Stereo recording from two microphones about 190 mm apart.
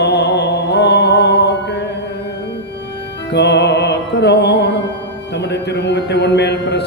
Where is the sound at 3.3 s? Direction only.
65° left (ahead or behind).